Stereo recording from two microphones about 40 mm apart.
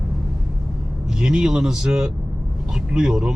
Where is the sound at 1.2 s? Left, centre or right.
Centre.